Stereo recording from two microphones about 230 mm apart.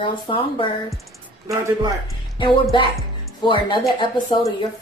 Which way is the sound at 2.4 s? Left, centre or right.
Left.